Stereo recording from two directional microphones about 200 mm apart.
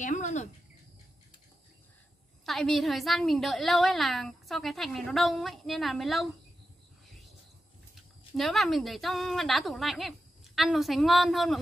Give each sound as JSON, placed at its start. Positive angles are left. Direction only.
{"t": 0.0, "sound": "speech", "side_deg": 35}
{"t": 2.4, "sound": "a woman's voice", "side_deg": 0}
{"t": 8.4, "sound": "a woman's voice", "side_deg": 0}